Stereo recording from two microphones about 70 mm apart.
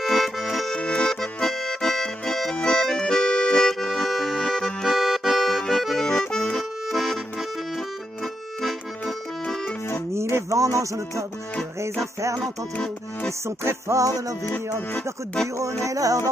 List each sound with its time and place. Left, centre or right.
0.0 s accordion: centre
0.7 s accordion: centre
10.1 s a sound: right
12.0 s music: right
13.7 s music: right
15.4 s music: right